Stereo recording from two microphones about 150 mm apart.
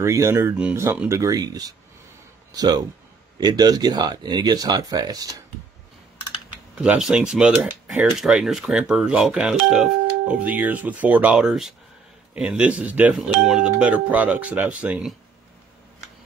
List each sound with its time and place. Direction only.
0.0 s speech: 20° right (ahead or behind)
1.0 s speech: 20° right (ahead or behind)
6.7 s speech: 5° right (ahead or behind)